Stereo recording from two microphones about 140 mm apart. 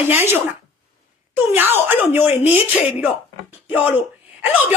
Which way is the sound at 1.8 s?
15° right (ahead or behind).